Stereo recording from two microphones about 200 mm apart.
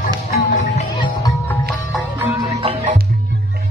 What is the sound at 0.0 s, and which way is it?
Music, 40° left (ahead or behind).